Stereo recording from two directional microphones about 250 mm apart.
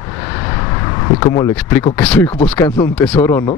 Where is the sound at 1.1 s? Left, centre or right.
Centre.